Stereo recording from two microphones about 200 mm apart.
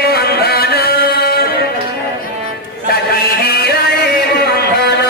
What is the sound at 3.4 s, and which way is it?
Music, 55° left (ahead or behind).